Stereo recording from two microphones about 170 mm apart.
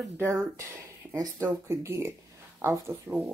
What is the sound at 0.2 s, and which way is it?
Speech, 20° right (ahead or behind).